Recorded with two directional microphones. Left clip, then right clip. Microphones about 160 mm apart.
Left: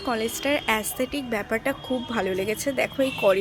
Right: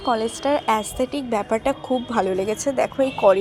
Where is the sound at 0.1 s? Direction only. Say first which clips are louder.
Right 4 dB; 10° right (ahead or behind).